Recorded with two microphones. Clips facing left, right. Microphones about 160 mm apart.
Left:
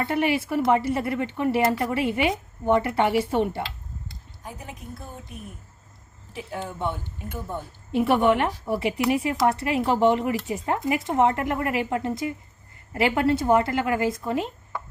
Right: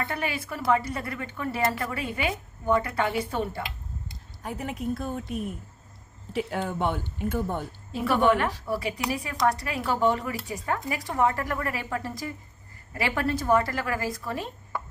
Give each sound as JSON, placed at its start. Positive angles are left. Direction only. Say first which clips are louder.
{"t": 0.1, "sound": "speech", "louder": "left 8 dB", "side_deg": 25}
{"t": 4.4, "sound": "speech", "louder": "right 8 dB", "side_deg": -70}
{"t": 7.9, "sound": "speech", "louder": "left 3 dB", "side_deg": 25}